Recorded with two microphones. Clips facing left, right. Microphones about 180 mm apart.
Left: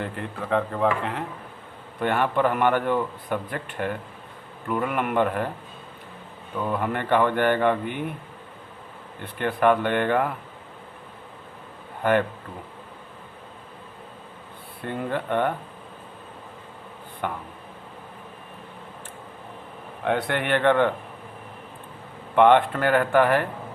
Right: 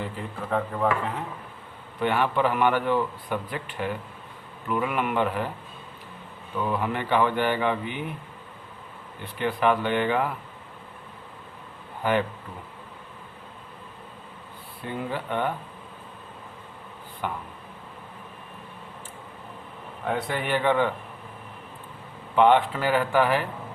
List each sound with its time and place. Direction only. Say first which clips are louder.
0.0 s speech: left 2 dB; 70° left (ahead or behind)
2.0 s a man's voice: left 1 dB; 50° left (ahead or behind)
6.7 s a man's voice: left 3 dB; 50° left (ahead or behind)
9.2 s a man's voice: left 3 dB; 55° left (ahead or behind)
14.8 s speech: left 3 dB; 55° left (ahead or behind)
17.2 s speech: left 2 dB; 55° left (ahead or behind)
20.1 s speech: left 3 dB; 80° left; by 20.9 s 65° left (ahead or behind)
22.4 s speech: left 2 dB; 60° left (ahead or behind)